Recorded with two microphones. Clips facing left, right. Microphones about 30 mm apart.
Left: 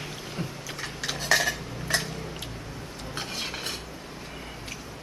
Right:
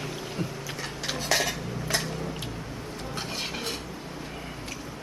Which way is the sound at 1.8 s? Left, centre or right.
Centre.